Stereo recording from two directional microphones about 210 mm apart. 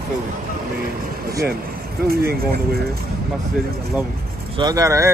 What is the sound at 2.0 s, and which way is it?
Speech, 45° right (ahead or behind).